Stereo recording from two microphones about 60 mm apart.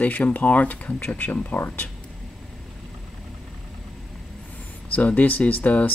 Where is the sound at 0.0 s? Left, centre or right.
Left.